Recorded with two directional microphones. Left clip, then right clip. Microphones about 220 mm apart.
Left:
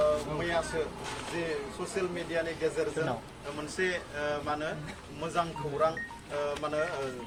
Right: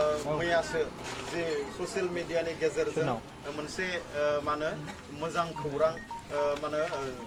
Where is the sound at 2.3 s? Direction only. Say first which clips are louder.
Right 2 dB; 10° right (ahead or behind).